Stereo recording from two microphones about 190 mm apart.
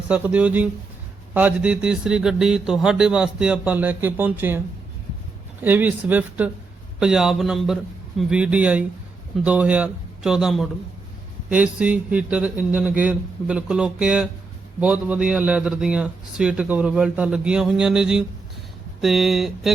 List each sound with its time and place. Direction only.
0.1 s a man's voice: 5° right (ahead or behind)
5.6 s a man's voice: 10° right (ahead or behind)